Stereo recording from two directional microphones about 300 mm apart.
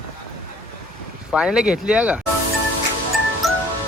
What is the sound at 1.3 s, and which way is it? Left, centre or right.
Speech, centre.